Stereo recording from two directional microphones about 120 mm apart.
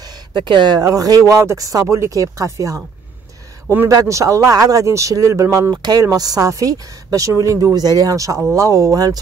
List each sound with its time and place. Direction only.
0.3 s speech: 40° right (ahead or behind); by 2.8 s 25° right (ahead or behind)
3.9 s speech: 25° right (ahead or behind)